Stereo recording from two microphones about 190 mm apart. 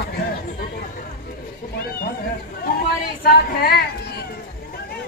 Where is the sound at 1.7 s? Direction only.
55° left (ahead or behind).